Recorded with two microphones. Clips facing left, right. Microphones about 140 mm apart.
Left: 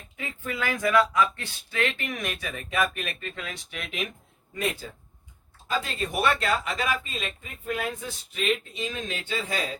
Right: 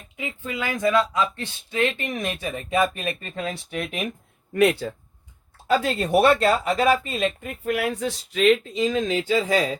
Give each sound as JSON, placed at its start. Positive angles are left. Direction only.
{"t": 0.2, "sound": "speech", "side_deg": -20}
{"t": 4.5, "sound": "speech", "side_deg": -70}
{"t": 6.2, "sound": "speech", "side_deg": -30}
{"t": 7.0, "sound": "speech", "side_deg": -65}